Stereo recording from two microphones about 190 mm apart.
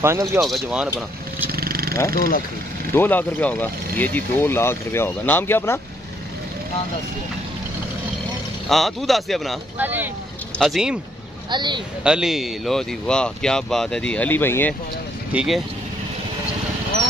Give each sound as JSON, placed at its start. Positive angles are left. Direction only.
{"t": 0.0, "sound": "speech", "side_deg": -15}
{"t": 0.4, "sound": "speech", "side_deg": 0}
{"t": 1.5, "sound": "wild animals", "side_deg": -50}
{"t": 2.0, "sound": "speech", "side_deg": 15}
{"t": 8.6, "sound": "speech", "side_deg": 0}
{"t": 11.5, "sound": "speech", "side_deg": -25}
{"t": 12.0, "sound": "speech", "side_deg": -5}
{"t": 15.3, "sound": "speech", "side_deg": 0}